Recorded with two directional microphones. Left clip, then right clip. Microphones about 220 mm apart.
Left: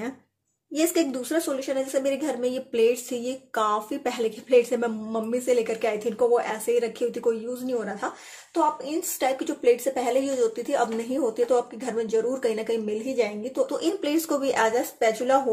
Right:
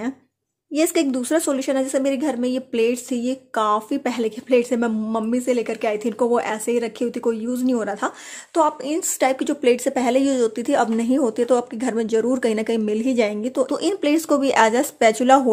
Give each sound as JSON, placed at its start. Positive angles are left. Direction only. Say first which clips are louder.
{"t": 0.7, "sound": "speech", "louder": "right 4 dB", "side_deg": -30}